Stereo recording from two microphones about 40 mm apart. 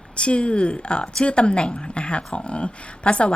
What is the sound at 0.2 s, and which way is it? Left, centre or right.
A woman's voice, left.